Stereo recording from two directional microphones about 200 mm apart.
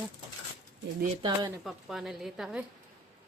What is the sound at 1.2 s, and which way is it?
Speech, 20° right (ahead or behind).